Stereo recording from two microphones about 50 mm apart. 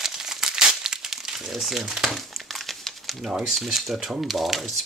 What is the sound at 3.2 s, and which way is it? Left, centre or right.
Speech, centre.